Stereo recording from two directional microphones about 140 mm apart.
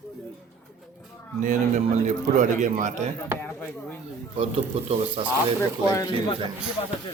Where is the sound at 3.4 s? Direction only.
10° left (ahead or behind).